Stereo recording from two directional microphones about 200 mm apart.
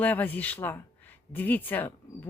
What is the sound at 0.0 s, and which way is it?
Speech, 10° left (ahead or behind).